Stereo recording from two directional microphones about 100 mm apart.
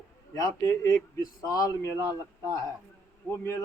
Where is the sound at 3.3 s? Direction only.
30° left (ahead or behind).